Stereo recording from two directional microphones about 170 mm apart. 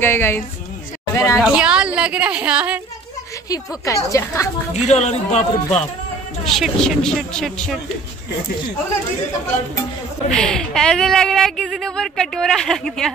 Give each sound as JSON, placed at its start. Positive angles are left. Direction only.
{"t": 0.0, "sound": "speech", "side_deg": 15}
{"t": 1.4, "sound": "a woman's voice", "side_deg": -5}
{"t": 3.4, "sound": "speech", "side_deg": 20}
{"t": 4.8, "sound": "a man's voice", "side_deg": 40}
{"t": 6.4, "sound": "a woman's voice", "side_deg": 5}
{"t": 10.3, "sound": "a woman's voice", "side_deg": 5}